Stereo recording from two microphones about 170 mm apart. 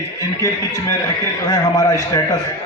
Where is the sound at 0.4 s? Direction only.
20° left (ahead or behind).